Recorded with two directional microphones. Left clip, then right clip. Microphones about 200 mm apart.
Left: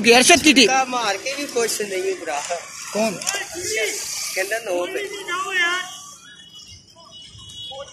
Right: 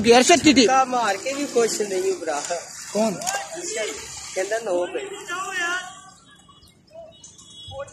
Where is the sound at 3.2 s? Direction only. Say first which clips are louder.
Left 1 dB; 50° right (ahead or behind).